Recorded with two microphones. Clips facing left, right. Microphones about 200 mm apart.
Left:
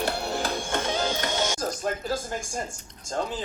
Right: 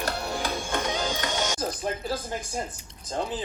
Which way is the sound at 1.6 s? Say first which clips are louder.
Left 1 dB; 5° right (ahead or behind).